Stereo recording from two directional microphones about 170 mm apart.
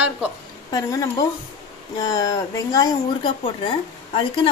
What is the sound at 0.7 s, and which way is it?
A woman's voice, 20° left (ahead or behind).